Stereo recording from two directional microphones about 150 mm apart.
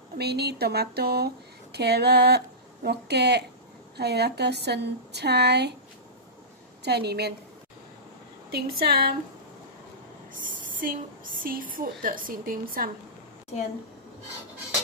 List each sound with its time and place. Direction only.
0.2 s speech: 90° right
6.8 s speech: 90° right
8.5 s speech: 90° right
11.4 s a woman's voice: 70° right (ahead or behind)